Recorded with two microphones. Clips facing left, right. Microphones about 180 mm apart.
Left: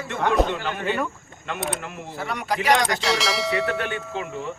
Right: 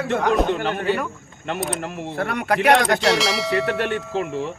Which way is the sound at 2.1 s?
60° right (ahead or behind).